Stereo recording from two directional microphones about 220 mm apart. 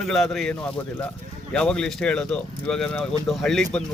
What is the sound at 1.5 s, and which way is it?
Speech, 5° left (ahead or behind).